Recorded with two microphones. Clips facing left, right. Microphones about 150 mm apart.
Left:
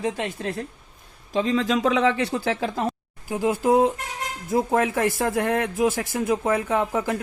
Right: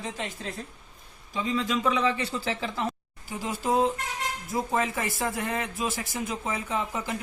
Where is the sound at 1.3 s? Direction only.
80° left.